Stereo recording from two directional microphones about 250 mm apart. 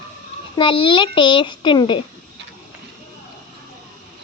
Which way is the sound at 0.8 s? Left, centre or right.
Centre.